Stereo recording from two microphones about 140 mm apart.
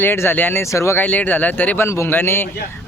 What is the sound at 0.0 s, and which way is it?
Speech, 15° left (ahead or behind).